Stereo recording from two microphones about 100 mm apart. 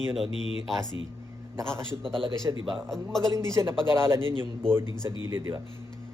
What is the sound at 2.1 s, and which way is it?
Speech, 60° right (ahead or behind).